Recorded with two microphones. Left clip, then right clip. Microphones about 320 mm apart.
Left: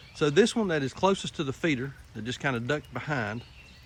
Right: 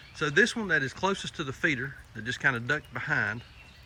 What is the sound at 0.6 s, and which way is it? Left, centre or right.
Speech, centre.